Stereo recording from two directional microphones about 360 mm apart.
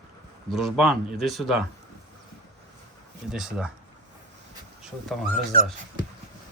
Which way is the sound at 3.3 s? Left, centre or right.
Centre.